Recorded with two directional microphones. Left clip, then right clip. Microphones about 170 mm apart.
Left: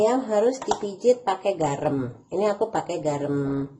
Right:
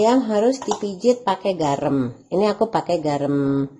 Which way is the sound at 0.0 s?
60° right (ahead or behind).